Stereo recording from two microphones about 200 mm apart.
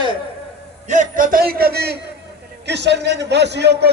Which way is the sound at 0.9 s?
40° right (ahead or behind).